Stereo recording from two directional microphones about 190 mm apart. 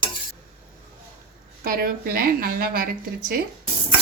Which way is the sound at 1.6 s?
50° right (ahead or behind).